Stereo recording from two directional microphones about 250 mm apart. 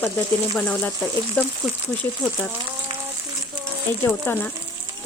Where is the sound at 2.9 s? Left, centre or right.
Right.